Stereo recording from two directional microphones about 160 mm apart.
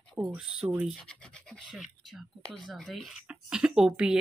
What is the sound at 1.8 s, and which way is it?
Speech, 5° right (ahead or behind).